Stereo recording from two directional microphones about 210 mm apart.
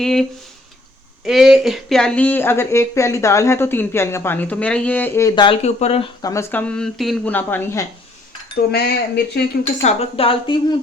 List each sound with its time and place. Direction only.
0.0 s speech: centre (ahead or behind); by 6.1 s 30° left (ahead or behind)
6.2 s speech: 15° left (ahead or behind)
8.7 s speech: 50° left (ahead or behind)
9.8 s speech: 30° left (ahead or behind)